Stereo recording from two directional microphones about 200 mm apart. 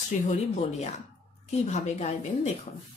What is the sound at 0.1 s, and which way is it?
Speech, 40° left (ahead or behind).